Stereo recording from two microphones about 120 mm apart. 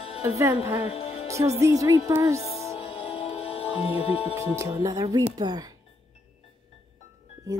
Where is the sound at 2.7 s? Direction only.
45° left (ahead or behind).